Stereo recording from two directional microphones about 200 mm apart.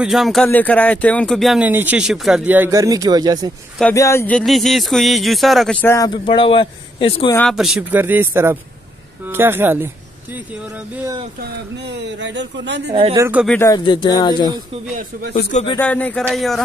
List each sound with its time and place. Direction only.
0.0 s speech: centre (ahead or behind); by 3.5 s 20° right (ahead or behind)
3.9 s speech: 15° left (ahead or behind)
7.3 s speech: centre (ahead or behind)
11.8 s speech: 60° right (ahead or behind)
12.9 s speech: 25° right (ahead or behind)
13.2 s speech: 10° right (ahead or behind)
13.5 s speech: 15° left (ahead or behind)
15.8 s speech: 5° left (ahead or behind)